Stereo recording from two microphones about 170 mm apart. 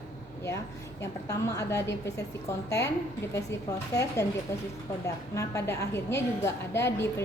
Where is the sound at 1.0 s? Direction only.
20° left (ahead or behind).